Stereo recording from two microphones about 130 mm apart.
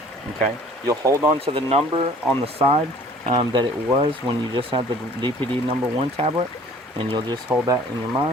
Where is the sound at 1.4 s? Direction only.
50° right (ahead or behind).